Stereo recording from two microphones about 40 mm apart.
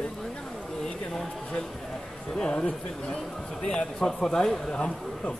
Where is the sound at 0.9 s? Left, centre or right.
Centre.